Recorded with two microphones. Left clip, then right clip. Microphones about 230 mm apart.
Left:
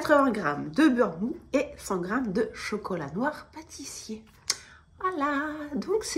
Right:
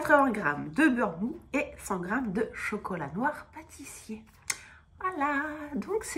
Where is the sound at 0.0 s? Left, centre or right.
Centre.